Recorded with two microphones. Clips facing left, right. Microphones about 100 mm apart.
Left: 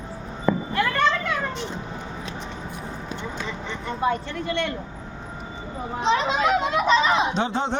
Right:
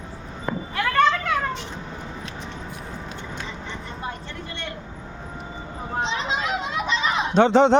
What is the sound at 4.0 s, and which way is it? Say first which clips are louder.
Speech: left 13 dB; 70° left (ahead or behind).